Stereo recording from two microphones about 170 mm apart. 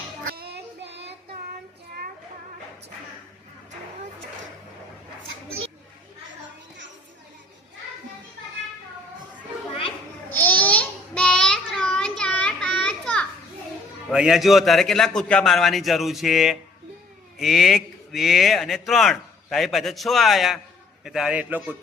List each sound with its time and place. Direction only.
0.3 s child singing: 70° right (ahead or behind)
10.2 s child singing: 10° left (ahead or behind)
14.1 s speech: 5° right (ahead or behind)